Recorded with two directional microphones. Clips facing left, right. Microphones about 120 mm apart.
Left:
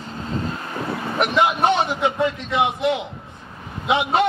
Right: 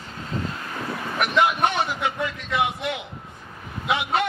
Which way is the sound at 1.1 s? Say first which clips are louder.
Left 2 dB; 25° left (ahead or behind).